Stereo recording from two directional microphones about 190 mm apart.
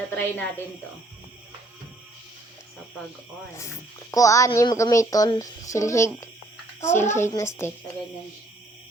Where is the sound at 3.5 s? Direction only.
15° left (ahead or behind).